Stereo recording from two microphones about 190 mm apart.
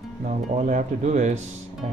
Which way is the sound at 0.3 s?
40° right (ahead or behind).